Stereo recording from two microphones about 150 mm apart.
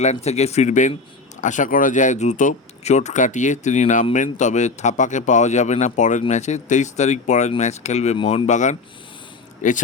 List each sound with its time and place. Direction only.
0.0 s speech: 45° left (ahead or behind)
8.4 s speech: 55° left (ahead or behind)